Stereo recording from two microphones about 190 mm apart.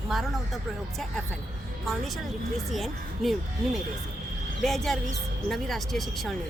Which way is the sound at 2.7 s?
Centre (ahead or behind).